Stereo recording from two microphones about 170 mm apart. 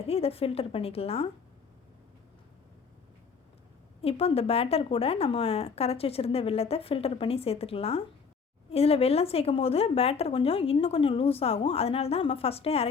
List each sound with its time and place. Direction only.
0.0 s speech: 35° left (ahead or behind)
4.0 s speech: 35° left (ahead or behind)